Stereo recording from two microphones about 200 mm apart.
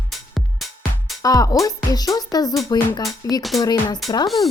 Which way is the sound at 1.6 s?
20° left (ahead or behind).